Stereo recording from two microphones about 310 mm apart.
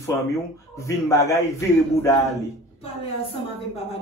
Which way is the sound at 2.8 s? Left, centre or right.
Centre.